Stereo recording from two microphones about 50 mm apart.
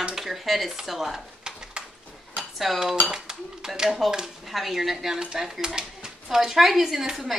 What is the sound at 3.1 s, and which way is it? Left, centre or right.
Speech, centre.